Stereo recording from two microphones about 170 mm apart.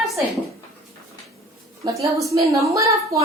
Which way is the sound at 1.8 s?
20° right (ahead or behind).